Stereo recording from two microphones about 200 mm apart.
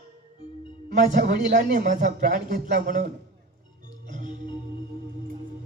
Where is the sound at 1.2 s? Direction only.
60° right (ahead or behind).